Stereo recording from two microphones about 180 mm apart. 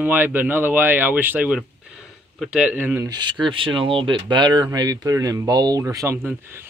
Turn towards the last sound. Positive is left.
turn(degrees=-15)  # may be behind; listen again after turning